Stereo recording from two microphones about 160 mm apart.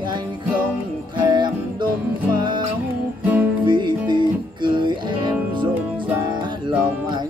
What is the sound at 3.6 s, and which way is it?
Music, 30° right (ahead or behind).